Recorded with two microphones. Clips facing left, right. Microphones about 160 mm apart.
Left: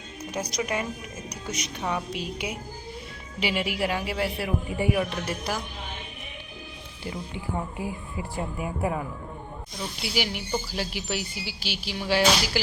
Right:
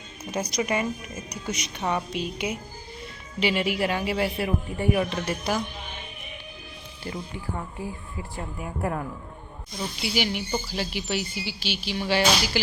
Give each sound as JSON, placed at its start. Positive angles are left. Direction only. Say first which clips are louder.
{"t": 0.3, "sound": "speech", "louder": "right 3 dB", "side_deg": 0}
{"t": 7.3, "sound": "speech", "louder": "left 2 dB", "side_deg": 15}